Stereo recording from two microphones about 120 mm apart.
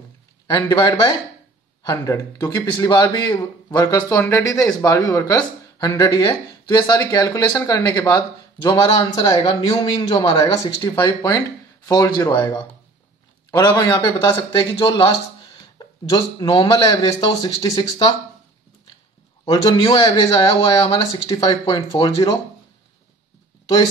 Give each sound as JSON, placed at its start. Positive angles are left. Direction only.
{"t": 0.5, "sound": "a man's voice", "side_deg": 40}
{"t": 8.6, "sound": "a man's voice", "side_deg": 40}
{"t": 10.3, "sound": "a man's voice", "side_deg": 30}
{"t": 19.9, "sound": "a man's voice", "side_deg": 40}